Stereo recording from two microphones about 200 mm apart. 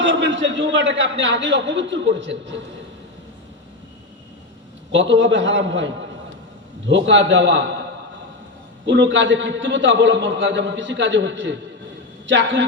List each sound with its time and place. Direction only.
0.0 s a man's voice: 65° right (ahead or behind)
4.9 s a man's voice: 65° right (ahead or behind)
8.9 s a man's voice: 65° right (ahead or behind)